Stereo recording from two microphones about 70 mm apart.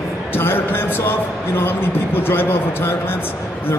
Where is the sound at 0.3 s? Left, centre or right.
Left.